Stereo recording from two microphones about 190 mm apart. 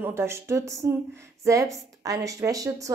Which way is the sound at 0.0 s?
15° right (ahead or behind).